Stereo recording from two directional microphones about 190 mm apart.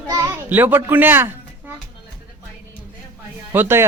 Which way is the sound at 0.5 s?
10° right (ahead or behind).